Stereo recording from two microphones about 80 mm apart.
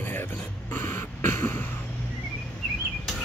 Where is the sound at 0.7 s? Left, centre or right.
Left.